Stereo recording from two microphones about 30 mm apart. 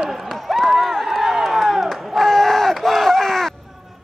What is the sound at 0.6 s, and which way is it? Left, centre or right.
Run, centre.